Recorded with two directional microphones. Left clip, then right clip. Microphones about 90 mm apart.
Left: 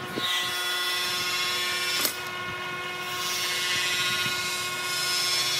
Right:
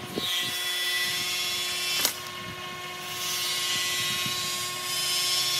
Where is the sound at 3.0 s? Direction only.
35° left (ahead or behind).